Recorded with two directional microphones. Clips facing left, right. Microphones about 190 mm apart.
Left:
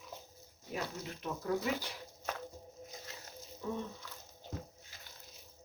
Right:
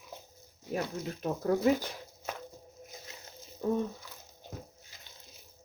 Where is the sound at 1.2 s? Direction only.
45° right (ahead or behind).